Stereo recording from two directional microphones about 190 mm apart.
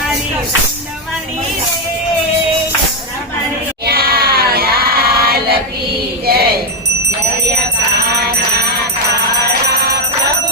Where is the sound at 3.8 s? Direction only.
55° right (ahead or behind).